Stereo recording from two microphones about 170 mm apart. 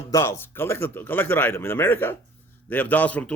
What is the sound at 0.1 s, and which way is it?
A man's voice, 15° left (ahead or behind).